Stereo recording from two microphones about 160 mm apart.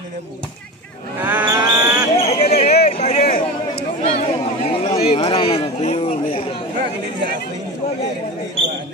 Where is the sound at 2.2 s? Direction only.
40° left (ahead or behind).